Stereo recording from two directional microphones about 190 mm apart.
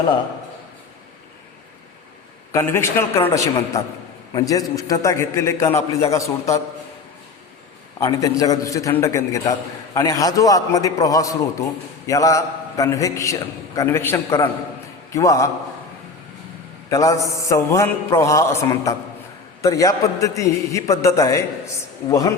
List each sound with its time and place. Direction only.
2.5 s a man's voice: 15° left (ahead or behind)
7.9 s a man's voice: 15° left (ahead or behind)
16.9 s a man's voice: 15° left (ahead or behind)